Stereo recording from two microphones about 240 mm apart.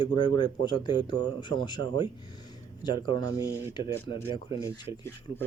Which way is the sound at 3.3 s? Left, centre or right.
Centre.